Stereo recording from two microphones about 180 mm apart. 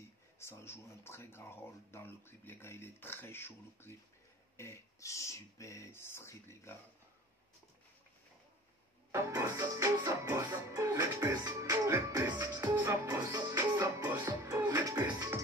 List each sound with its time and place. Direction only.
0.4 s speech: 15° left (ahead or behind)
9.1 s music: 15° right (ahead or behind)